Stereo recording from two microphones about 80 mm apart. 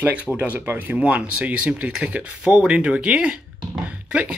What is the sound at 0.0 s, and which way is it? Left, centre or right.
Speech, right.